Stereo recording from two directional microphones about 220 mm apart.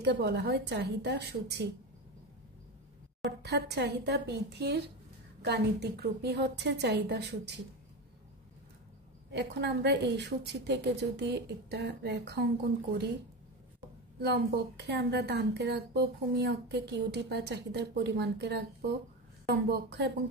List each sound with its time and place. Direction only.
0.0 s a woman's voice: 50° right (ahead or behind)
3.3 s a woman's voice: 50° right (ahead or behind)
9.3 s a woman's voice: 50° right (ahead or behind)
14.2 s a woman's voice: 50° right (ahead or behind)